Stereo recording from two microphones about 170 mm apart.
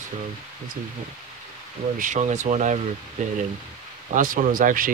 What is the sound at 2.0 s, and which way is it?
Speech, 45° right (ahead or behind).